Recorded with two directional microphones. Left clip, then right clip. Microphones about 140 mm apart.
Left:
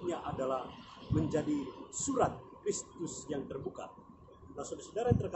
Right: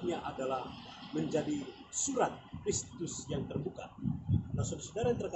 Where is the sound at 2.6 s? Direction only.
65° left (ahead or behind).